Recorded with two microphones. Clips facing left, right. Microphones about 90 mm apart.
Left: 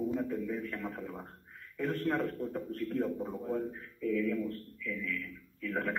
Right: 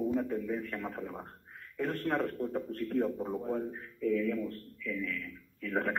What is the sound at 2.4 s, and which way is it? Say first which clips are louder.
Music: right 2 dB; centre (ahead or behind).